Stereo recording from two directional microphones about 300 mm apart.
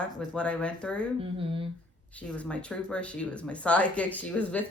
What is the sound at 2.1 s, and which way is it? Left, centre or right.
Speech, centre.